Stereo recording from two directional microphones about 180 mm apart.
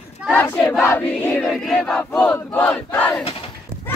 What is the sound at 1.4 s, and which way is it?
Battle cry, centre (ahead or behind).